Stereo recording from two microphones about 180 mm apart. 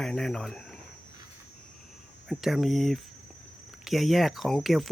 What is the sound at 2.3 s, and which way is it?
Speech, centre (ahead or behind).